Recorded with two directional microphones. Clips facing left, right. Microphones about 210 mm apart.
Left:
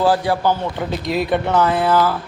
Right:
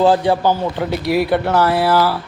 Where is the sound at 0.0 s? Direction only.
20° right (ahead or behind).